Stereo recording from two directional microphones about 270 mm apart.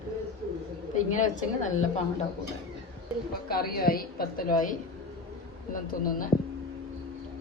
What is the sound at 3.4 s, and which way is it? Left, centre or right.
A man's voice, left.